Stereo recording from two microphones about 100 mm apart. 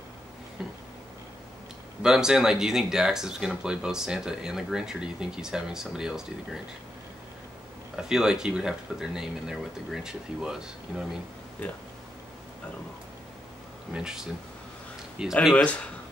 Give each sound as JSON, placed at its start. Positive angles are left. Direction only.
{"t": 0.6, "sound": "a sound", "side_deg": -5}
{"t": 2.0, "sound": "speech", "side_deg": -5}
{"t": 7.9, "sound": "speech", "side_deg": -5}
{"t": 13.9, "sound": "speech", "side_deg": -5}
{"t": 15.5, "sound": "a man's voice", "side_deg": 10}